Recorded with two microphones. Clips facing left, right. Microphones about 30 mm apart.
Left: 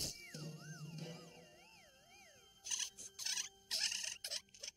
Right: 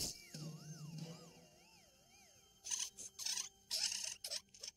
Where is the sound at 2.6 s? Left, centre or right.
Left.